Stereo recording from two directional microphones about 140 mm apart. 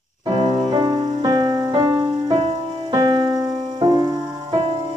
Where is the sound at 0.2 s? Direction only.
35° right (ahead or behind).